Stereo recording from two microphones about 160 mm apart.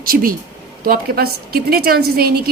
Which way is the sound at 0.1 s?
65° right (ahead or behind).